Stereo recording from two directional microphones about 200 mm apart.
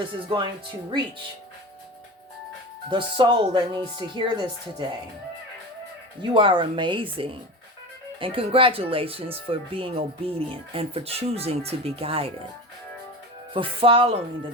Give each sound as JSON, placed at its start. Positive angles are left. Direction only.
{"t": 2.9, "sound": "speech", "side_deg": -25}
{"t": 6.3, "sound": "speech", "side_deg": -25}
{"t": 13.5, "sound": "speech", "side_deg": -25}